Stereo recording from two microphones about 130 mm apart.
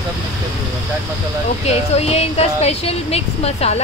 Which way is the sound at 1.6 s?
55° left (ahead or behind).